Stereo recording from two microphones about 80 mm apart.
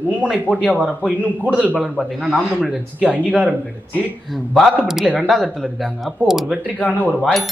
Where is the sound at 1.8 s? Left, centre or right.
Centre.